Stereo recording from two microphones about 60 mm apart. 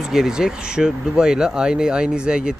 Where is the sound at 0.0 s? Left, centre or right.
Centre.